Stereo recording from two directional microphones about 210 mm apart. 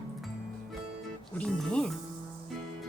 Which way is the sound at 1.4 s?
5° left (ahead or behind).